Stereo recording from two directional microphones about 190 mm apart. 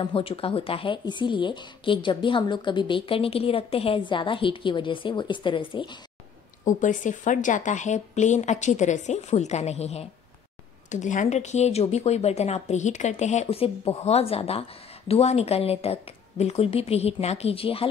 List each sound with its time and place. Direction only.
0.0 s speech: 25° left (ahead or behind)
6.6 s speech: 40° left (ahead or behind)